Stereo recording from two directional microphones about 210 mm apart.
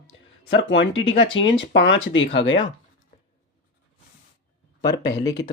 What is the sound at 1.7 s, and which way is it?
Speech, 60° left (ahead or behind).